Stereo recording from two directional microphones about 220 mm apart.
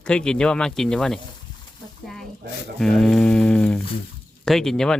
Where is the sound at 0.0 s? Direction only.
5° left (ahead or behind).